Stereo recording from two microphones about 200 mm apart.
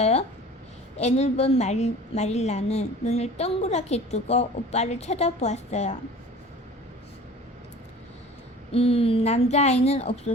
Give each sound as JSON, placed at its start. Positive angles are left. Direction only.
{"t": 0.0, "sound": "a sound", "side_deg": 30}
{"t": 0.9, "sound": "a woman's voice", "side_deg": 35}
{"t": 8.7, "sound": "a woman's voice", "side_deg": 30}